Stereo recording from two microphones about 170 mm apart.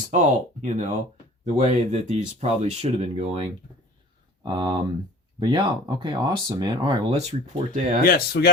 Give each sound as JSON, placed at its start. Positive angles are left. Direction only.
{"t": 0.1, "sound": "speech", "side_deg": -45}
{"t": 7.1, "sound": "speech", "side_deg": -40}
{"t": 8.0, "sound": "speech", "side_deg": 65}